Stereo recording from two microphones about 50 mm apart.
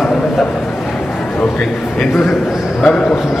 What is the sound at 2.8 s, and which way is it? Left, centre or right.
Speech, centre.